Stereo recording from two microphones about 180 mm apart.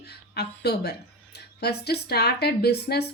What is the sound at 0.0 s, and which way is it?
Speech, 65° left (ahead or behind).